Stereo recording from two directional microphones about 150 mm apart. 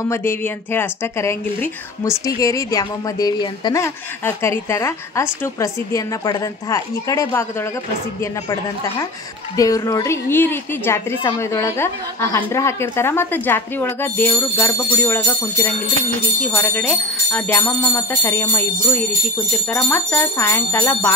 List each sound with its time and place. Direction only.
0.1 s speech: 15° left (ahead or behind)
9.6 s a woman's voice: 25° left (ahead or behind)